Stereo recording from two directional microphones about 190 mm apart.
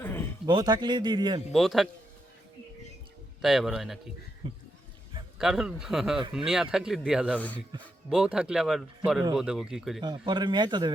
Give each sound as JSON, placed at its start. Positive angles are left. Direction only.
{"t": 0.0, "sound": "a sound", "side_deg": 10}
{"t": 0.4, "sound": "a man's voice", "side_deg": -20}
{"t": 1.5, "sound": "speech", "side_deg": 0}
{"t": 3.4, "sound": "speech", "side_deg": 0}
{"t": 4.4, "sound": "a man's voice", "side_deg": -25}
{"t": 5.4, "sound": "speech", "side_deg": 0}
{"t": 7.3, "sound": "a man's voice", "side_deg": 10}
{"t": 8.1, "sound": "speech", "side_deg": -5}
{"t": 10.0, "sound": "a man's voice", "side_deg": -25}